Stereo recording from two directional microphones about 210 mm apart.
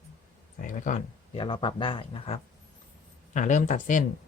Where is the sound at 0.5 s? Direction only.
40° left (ahead or behind).